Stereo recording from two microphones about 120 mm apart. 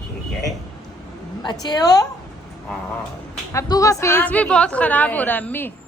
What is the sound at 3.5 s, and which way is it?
Speech, 25° left (ahead or behind).